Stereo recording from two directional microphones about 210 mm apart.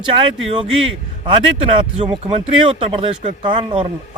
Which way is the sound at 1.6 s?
25° right (ahead or behind).